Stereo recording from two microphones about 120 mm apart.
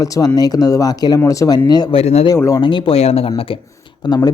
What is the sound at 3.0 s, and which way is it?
Speech, 60° left (ahead or behind).